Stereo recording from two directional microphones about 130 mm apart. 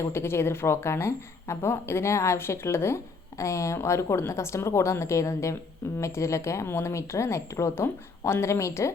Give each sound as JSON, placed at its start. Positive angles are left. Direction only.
{"t": 0.0, "sound": "a woman's voice", "side_deg": 20}